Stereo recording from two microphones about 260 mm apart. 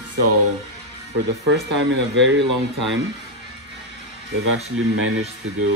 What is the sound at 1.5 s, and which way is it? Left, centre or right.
Speech, right.